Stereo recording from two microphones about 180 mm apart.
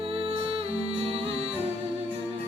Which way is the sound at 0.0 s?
30° right (ahead or behind).